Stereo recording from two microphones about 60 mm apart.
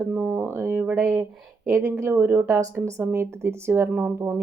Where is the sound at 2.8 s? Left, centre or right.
Right.